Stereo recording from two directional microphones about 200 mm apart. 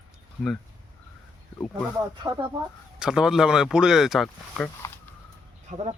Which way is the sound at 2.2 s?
15° right (ahead or behind).